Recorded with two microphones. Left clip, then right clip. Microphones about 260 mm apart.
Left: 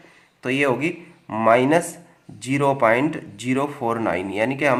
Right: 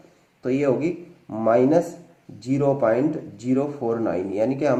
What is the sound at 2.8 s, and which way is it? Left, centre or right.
Speech, left.